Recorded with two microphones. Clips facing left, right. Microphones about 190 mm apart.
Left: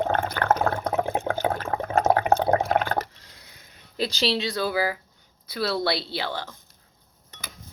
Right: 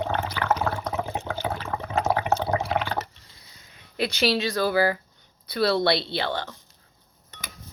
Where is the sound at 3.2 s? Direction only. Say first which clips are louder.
Left 3 dB; 80° left.